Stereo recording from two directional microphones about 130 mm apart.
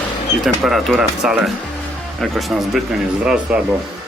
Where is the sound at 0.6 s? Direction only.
Centre (ahead or behind).